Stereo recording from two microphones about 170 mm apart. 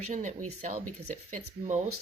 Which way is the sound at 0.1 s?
45° right (ahead or behind).